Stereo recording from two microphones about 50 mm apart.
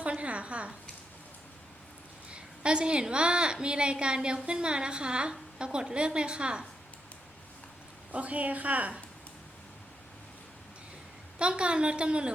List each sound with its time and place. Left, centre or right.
0.0 s a sound: right
2.3 s a woman's voice: centre
8.1 s a woman's voice: right
11.3 s a woman's voice: right